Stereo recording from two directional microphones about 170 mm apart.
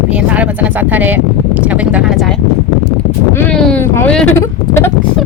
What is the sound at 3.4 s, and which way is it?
Boat, 5° left (ahead or behind).